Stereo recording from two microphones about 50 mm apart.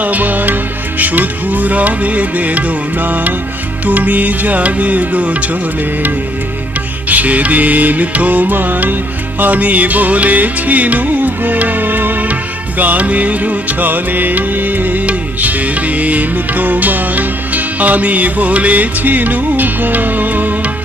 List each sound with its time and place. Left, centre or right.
0.0 s music: right
7.1 s music: right